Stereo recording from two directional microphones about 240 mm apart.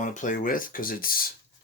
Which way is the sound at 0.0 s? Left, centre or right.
Left.